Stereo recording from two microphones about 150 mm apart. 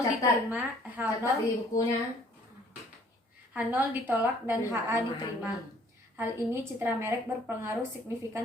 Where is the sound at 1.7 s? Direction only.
20° left (ahead or behind).